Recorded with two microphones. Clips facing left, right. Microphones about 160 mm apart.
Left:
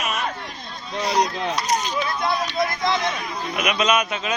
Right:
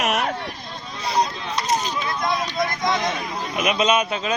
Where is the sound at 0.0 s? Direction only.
75° right (ahead or behind).